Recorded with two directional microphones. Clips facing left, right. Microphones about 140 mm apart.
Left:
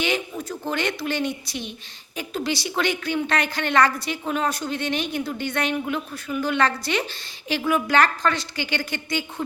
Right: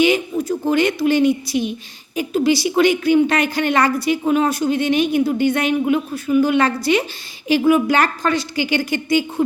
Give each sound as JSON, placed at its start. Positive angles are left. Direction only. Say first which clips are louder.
{"t": 0.0, "sound": "a woman's voice", "louder": "right 9 dB", "side_deg": -5}